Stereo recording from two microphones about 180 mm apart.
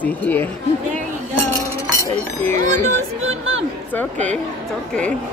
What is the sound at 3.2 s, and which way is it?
Speech, 90° right.